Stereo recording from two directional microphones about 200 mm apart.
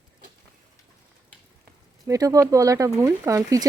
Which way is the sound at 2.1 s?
15° right (ahead or behind).